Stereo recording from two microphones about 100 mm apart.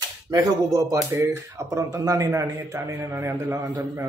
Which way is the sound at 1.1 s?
25° right (ahead or behind).